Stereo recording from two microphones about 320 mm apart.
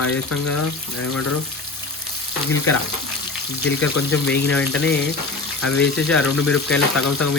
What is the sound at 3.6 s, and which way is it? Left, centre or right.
Speech, left.